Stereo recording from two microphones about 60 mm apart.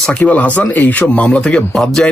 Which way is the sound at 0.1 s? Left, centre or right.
Left.